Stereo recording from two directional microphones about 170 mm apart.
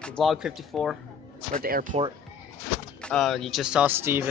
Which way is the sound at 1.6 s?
55° right (ahead or behind).